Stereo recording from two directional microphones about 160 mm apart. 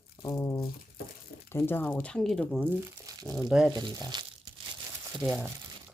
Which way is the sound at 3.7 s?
25° right (ahead or behind).